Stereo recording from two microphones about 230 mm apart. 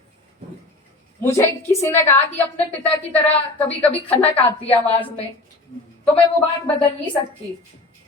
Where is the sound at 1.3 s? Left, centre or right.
Centre.